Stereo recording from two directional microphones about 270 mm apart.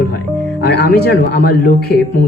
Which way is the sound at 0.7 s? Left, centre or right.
Left.